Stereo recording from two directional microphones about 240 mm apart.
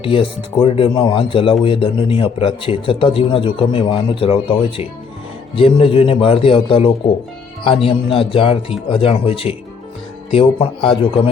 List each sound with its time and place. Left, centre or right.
0.0 s speech: left